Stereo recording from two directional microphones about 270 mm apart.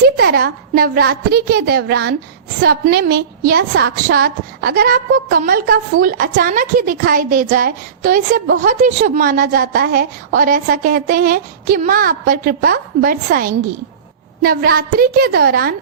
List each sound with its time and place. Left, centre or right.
0.0 s a woman's voice: right